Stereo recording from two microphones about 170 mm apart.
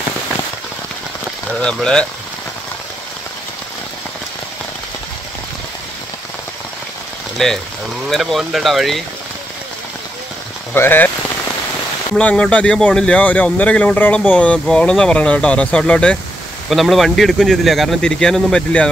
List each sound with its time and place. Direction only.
1.6 s speech: 5° left (ahead or behind)
7.4 s speech: centre (ahead or behind)
10.7 s speech: 10° left (ahead or behind)
12.2 s speech: 5° left (ahead or behind)